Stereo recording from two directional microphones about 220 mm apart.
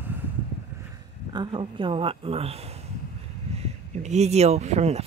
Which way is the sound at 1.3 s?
20° right (ahead or behind).